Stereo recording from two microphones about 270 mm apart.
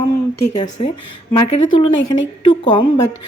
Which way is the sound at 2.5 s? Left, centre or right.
Centre.